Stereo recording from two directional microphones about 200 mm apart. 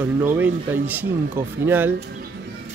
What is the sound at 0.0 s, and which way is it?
Speech, 10° right (ahead or behind).